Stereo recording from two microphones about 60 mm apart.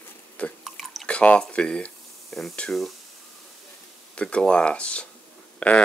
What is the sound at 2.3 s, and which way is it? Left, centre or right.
Speech, centre.